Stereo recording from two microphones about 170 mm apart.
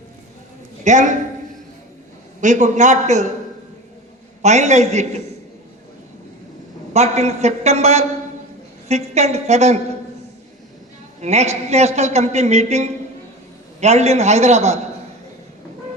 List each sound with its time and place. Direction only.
0.9 s a man's voice: 45° right (ahead or behind)
2.4 s a man's voice: 45° right (ahead or behind)
4.4 s a man's voice: 40° right (ahead or behind)
6.9 s a man's voice: 40° right (ahead or behind)
11.2 s a man's voice: 40° right (ahead or behind)